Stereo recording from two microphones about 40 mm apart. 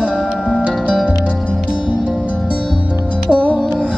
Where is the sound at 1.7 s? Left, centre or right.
Right.